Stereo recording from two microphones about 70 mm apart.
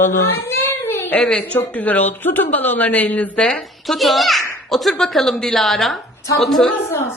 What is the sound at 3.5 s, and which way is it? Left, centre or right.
A woman's voice, centre.